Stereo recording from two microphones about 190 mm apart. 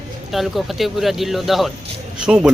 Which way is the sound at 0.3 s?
Centre (ahead or behind).